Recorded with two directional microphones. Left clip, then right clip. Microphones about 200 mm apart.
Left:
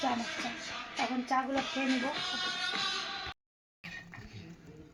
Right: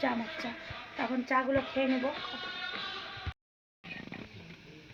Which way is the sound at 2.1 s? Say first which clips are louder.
Left 4 dB; 65° left (ahead or behind).